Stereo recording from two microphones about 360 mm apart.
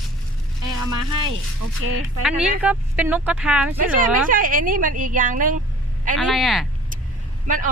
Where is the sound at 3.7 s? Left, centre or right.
Right.